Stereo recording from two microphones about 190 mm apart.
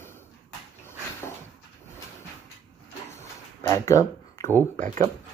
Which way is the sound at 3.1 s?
15° left (ahead or behind).